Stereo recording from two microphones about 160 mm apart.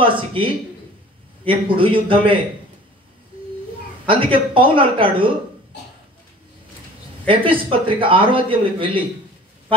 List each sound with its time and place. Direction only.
0.0 s speech: 35° right (ahead or behind)
4.0 s speech: 35° right (ahead or behind)
7.2 s speech: 35° right (ahead or behind)